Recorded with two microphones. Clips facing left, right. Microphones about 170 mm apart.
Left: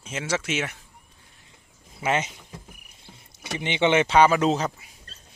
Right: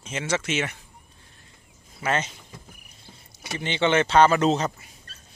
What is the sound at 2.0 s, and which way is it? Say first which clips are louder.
Speech: left 1 dB; 15° left (ahead or behind).